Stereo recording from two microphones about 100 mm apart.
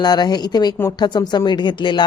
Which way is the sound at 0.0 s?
45° left (ahead or behind).